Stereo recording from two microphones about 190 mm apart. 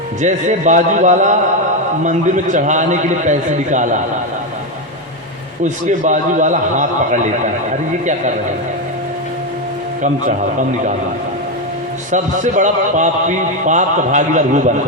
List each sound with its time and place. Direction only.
0.2 s a man's voice: 40° right (ahead or behind)
5.6 s a man's voice: 40° right (ahead or behind)
12.1 s a man's voice: 40° right (ahead or behind)